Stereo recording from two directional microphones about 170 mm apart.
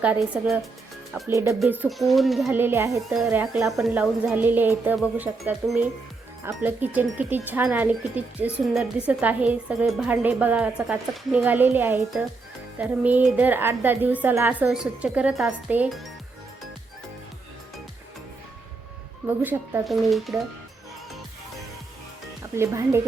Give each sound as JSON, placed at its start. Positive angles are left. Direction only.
{"t": 0.0, "sound": "speech", "side_deg": -5}
{"t": 1.3, "sound": "a woman's voice", "side_deg": -20}
{"t": 1.8, "sound": "speech", "side_deg": 0}
{"t": 2.6, "sound": "a woman's voice", "side_deg": -15}
{"t": 3.3, "sound": "a woman's voice", "side_deg": -5}
{"t": 19.3, "sound": "a woman's voice", "side_deg": -10}
{"t": 19.9, "sound": "speech", "side_deg": 0}
{"t": 22.5, "sound": "a woman's voice", "side_deg": -15}